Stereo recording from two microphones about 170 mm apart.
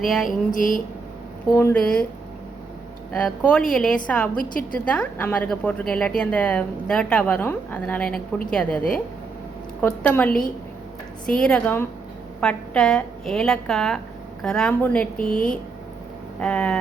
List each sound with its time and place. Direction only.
0.3 s a sound: 50° left (ahead or behind)
1.5 s a woman's voice: 10° left (ahead or behind)
3.1 s a woman's voice: 5° left (ahead or behind)
9.8 s a woman's voice: 10° left (ahead or behind)
16.4 s a woman's voice: 5° left (ahead or behind)